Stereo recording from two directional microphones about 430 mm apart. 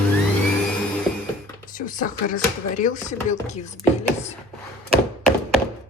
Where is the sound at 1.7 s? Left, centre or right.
Centre.